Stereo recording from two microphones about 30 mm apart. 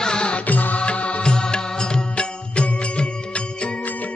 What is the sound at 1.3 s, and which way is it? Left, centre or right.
Music, left.